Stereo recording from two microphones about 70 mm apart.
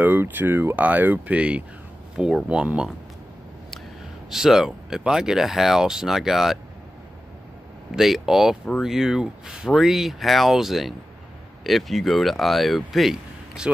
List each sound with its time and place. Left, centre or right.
0.0 s speech: right
4.3 s speech: centre
7.9 s speech: centre